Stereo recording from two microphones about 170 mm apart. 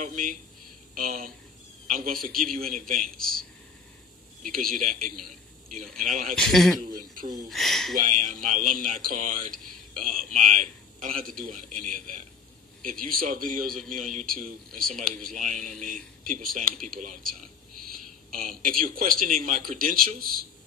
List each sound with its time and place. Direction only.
0.0 s speech: 50° right (ahead or behind)
4.4 s speech: 55° right (ahead or behind)
6.3 s speech: centre (ahead or behind)
8.0 s a man's voice: 50° right (ahead or behind)